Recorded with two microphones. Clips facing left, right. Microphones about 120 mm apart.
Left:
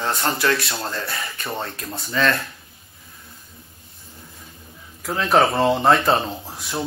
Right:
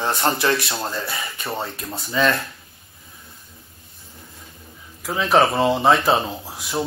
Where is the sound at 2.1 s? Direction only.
15° right (ahead or behind).